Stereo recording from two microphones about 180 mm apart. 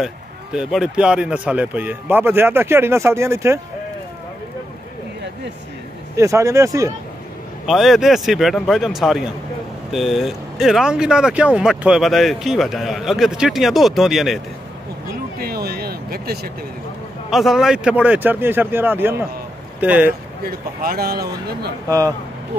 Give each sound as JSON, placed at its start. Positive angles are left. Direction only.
{"t": 0.0, "sound": "speech", "side_deg": -5}
{"t": 6.1, "sound": "speech", "side_deg": -15}
{"t": 7.6, "sound": "speech", "side_deg": 0}
{"t": 15.3, "sound": "a sound", "side_deg": -60}
{"t": 17.3, "sound": "speech", "side_deg": 0}
{"t": 20.4, "sound": "speech", "side_deg": -55}
{"t": 21.8, "sound": "speech", "side_deg": -20}